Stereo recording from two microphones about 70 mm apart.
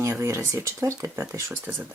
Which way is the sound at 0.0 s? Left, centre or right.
Right.